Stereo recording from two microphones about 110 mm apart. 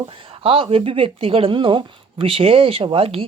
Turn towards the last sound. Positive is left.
turn(degrees=-60)  # may be behind; listen again after turning